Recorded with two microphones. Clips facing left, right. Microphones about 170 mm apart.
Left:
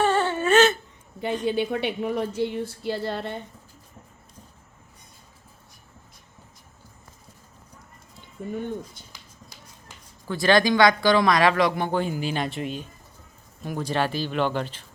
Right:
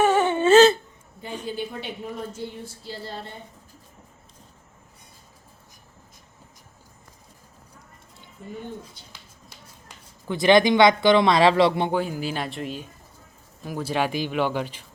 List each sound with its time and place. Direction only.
0.0 s whimper: 15° right (ahead or behind)
0.5 s a sound: 35° right (ahead or behind)
1.5 s a woman's voice: 70° left (ahead or behind)
10.2 s speech: 20° right (ahead or behind)
11.9 s speech: 5° right (ahead or behind)